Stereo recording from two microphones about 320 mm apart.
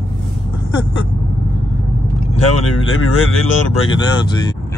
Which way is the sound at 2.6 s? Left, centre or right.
Left.